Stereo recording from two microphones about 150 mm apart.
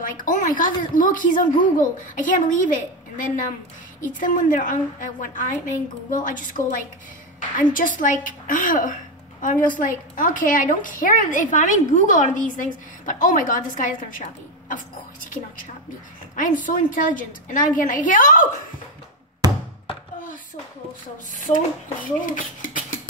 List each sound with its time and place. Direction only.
0.0 s a woman's voice: 60° left (ahead or behind)
16.3 s a woman's voice: 60° left (ahead or behind)
19.4 s thunk: 25° right (ahead or behind)
21.5 s a woman's voice: 55° left (ahead or behind)